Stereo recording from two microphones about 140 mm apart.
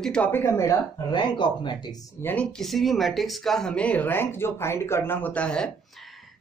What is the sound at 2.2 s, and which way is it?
Speech, 5° left (ahead or behind).